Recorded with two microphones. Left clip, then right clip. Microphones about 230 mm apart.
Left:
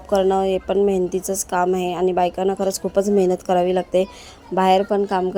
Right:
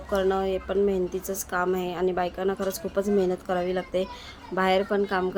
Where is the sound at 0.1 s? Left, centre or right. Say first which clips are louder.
Left 7 dB; left.